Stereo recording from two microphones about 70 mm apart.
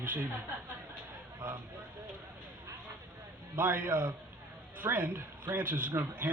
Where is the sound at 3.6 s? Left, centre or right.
Right.